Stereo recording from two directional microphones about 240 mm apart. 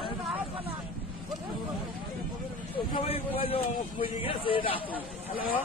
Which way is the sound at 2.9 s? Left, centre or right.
Left.